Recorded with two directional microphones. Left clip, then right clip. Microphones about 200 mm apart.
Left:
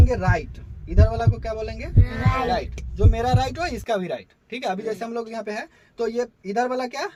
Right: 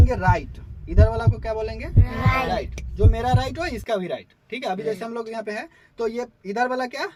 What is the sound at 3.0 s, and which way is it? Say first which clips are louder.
Speech: even; 20° left (ahead or behind).